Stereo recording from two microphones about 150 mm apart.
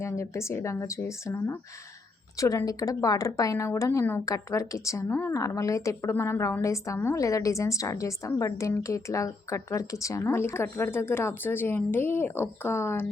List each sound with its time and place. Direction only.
0.0 s a woman's voice: 20° left (ahead or behind)